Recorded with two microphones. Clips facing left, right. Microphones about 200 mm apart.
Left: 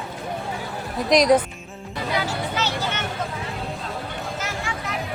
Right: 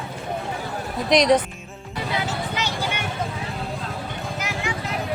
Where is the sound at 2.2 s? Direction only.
15° right (ahead or behind).